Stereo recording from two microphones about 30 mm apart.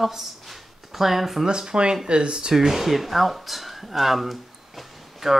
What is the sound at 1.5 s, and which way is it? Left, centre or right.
Speech, right.